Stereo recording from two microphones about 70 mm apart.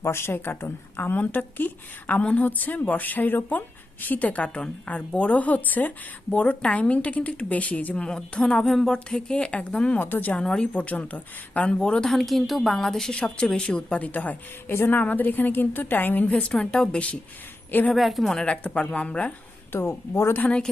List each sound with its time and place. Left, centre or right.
0.0 s a woman's voice: left
8.0 s a woman's voice: centre
10.0 s a woman's voice: left
10.3 s a woman's voice: centre
12.0 s a woman's voice: centre
17.9 s a woman's voice: centre
18.4 s a woman's voice: centre
19.7 s speech: left
20.4 s a woman's voice: centre